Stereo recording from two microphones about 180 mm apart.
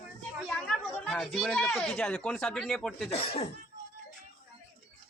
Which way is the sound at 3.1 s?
35° left (ahead or behind).